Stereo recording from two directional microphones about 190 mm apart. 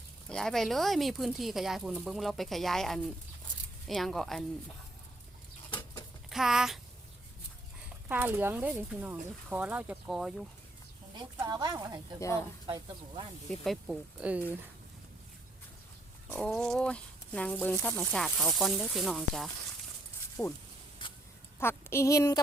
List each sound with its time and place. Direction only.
0.3 s speech: 5° left (ahead or behind)
5.7 s bird: 25° left (ahead or behind)
6.3 s speech: centre (ahead or behind)
8.0 s speech: 10° right (ahead or behind)
11.2 s speech: 20° right (ahead or behind)
13.7 s speech: 5° right (ahead or behind)
16.3 s speech: 5° left (ahead or behind)
20.4 s a woman's voice: 15° left (ahead or behind)
21.0 s a sound: 25° left (ahead or behind)
21.6 s a woman's voice: 10° left (ahead or behind)